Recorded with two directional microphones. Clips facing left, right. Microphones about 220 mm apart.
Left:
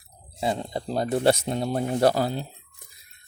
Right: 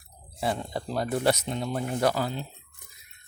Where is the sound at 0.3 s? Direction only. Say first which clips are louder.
Left 2 dB; 20° left (ahead or behind); by 2.5 s 35° left (ahead or behind).